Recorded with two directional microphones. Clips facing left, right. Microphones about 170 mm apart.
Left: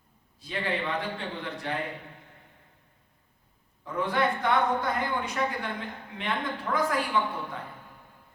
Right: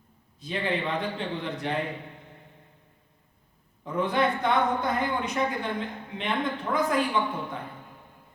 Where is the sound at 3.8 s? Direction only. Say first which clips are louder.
Right 2 dB; 20° right (ahead or behind).